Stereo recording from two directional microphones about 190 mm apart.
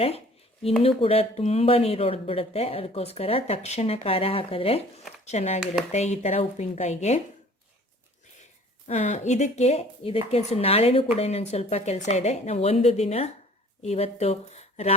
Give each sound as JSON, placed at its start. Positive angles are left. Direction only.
{"t": 0.8, "sound": "speech", "side_deg": 30}
{"t": 8.9, "sound": "speech", "side_deg": 40}